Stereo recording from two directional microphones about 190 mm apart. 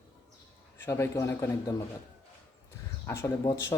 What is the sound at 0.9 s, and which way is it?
Speech, 15° left (ahead or behind).